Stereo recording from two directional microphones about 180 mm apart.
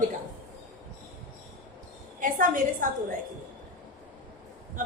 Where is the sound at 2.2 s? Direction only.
50° right (ahead or behind).